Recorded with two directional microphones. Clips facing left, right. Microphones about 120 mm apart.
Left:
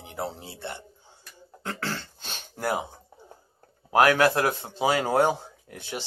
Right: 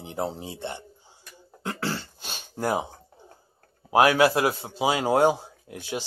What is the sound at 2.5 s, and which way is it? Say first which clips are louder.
Speech: right 2 dB; 20° right (ahead or behind).